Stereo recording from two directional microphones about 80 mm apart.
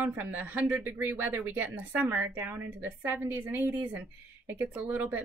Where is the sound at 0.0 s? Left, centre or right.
Right.